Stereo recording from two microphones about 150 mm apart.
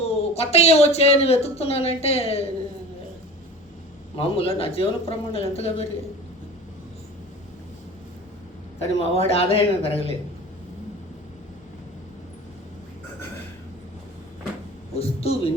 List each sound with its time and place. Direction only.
0.0 s speech: 45° left (ahead or behind)
4.2 s a man's voice: 40° left (ahead or behind)
8.9 s a man's voice: 40° left (ahead or behind)
14.9 s a man's voice: 40° left (ahead or behind)